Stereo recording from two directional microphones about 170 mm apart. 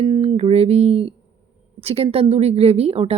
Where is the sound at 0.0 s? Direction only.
30° right (ahead or behind).